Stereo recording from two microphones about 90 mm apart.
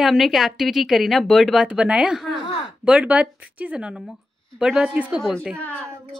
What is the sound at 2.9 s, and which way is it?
Speech, 15° right (ahead or behind).